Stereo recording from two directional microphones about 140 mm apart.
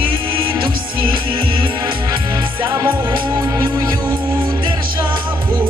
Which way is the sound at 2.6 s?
20° right (ahead or behind).